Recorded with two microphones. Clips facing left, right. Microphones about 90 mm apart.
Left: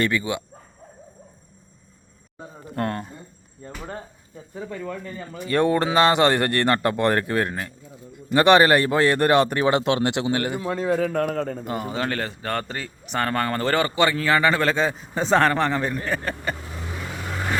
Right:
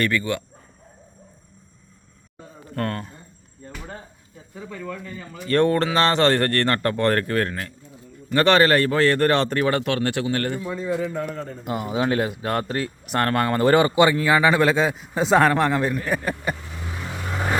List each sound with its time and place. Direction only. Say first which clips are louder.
0.0 s speech: even; 15° left (ahead or behind)
2.7 s speech: even; 20° left (ahead or behind)
4.9 s a man's voice: left 1 dB; 40° left (ahead or behind)
5.5 s speech: right 1 dB; 10° left (ahead or behind)
10.6 s a man's voice: left 3 dB; 75° left (ahead or behind)
11.6 s speech: right 3 dB; 5° right (ahead or behind)